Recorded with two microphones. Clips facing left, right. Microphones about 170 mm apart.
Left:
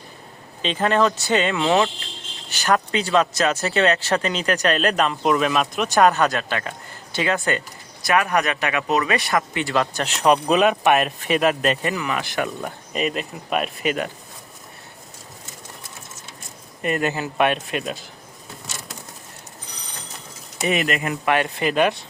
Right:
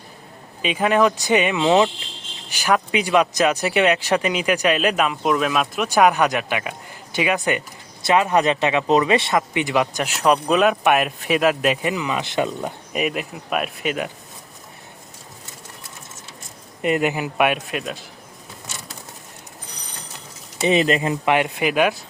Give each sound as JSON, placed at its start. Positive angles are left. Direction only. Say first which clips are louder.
{"t": 0.6, "sound": "speech", "louder": "right 2 dB", "side_deg": -10}
{"t": 16.8, "sound": "speech", "louder": "right 3 dB", "side_deg": -15}
{"t": 20.6, "sound": "speech", "louder": "right 4 dB", "side_deg": -25}